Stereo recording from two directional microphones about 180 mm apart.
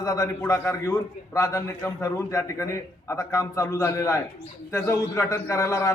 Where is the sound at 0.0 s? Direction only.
20° left (ahead or behind).